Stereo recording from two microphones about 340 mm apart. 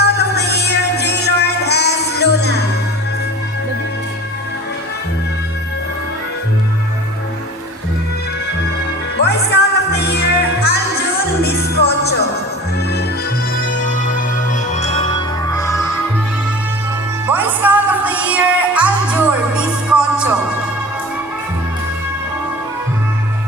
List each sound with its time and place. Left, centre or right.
0.0 s music: left
9.2 s music: left
13.6 s music: left
17.2 s music: centre